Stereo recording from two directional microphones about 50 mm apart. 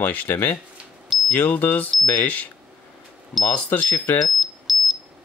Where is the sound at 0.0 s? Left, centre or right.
Left.